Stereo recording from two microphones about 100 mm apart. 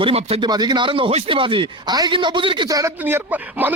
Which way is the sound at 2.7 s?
35° right (ahead or behind).